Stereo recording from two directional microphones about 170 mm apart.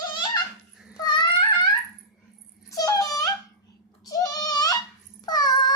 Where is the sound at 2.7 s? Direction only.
20° left (ahead or behind).